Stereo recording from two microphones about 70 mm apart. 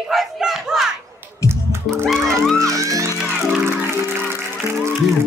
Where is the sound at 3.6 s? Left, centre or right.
Right.